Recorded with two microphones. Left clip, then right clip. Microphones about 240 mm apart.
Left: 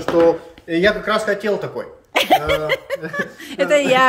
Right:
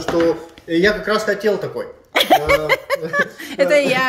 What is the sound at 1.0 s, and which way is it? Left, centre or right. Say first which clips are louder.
Speech: right 1 dB; centre.